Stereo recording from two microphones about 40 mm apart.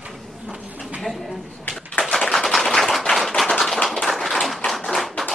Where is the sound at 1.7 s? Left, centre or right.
Left.